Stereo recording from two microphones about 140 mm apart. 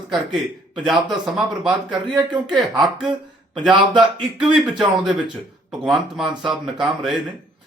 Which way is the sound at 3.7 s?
35° right (ahead or behind).